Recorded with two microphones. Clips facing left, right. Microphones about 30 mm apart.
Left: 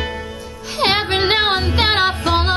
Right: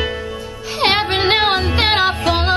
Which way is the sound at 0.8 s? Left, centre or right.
Centre.